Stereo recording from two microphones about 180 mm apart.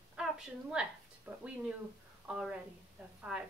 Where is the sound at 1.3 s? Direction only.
10° right (ahead or behind).